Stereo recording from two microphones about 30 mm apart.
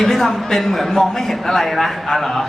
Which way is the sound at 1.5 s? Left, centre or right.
Centre.